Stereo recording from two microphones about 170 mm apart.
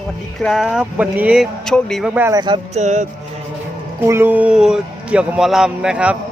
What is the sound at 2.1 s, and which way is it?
Speech, 15° right (ahead or behind).